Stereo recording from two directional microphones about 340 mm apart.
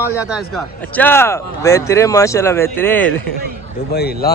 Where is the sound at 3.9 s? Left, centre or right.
Left.